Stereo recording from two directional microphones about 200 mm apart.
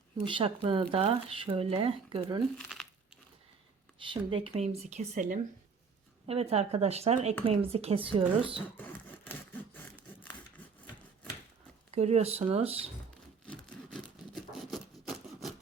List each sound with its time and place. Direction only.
0.3 s speech: 25° right (ahead or behind)
4.0 s speech: 25° right (ahead or behind)
8.9 s a sound: 10° left (ahead or behind)
11.9 s speech: 30° right (ahead or behind)
14.7 s rub: centre (ahead or behind)